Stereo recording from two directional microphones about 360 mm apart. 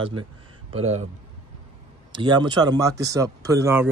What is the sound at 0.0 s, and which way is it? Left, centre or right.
Speech, centre.